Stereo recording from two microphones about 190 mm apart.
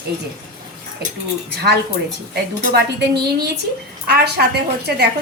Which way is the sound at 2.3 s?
60° right (ahead or behind).